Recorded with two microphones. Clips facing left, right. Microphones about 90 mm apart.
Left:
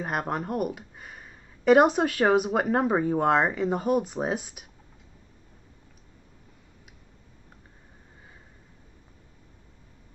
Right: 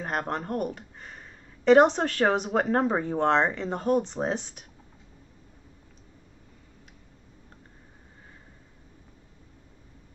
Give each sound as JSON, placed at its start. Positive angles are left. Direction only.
{"t": 0.0, "sound": "speech", "side_deg": 5}